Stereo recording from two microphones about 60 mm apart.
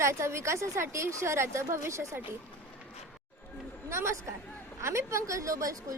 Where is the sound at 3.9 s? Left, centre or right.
Right.